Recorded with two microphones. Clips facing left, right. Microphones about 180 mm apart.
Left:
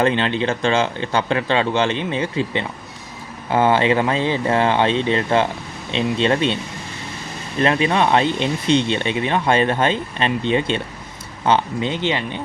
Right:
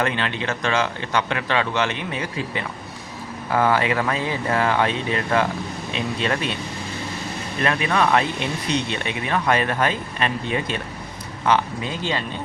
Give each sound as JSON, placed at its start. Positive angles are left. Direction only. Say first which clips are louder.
{"t": 0.0, "sound": "speech", "louder": "left 6 dB", "side_deg": 30}
{"t": 7.6, "sound": "speech", "louder": "left 4 dB", "side_deg": 25}